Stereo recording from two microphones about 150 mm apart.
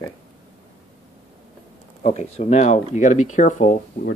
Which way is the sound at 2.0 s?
45° left (ahead or behind).